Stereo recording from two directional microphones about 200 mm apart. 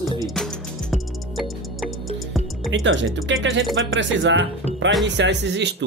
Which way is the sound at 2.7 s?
70° right (ahead or behind).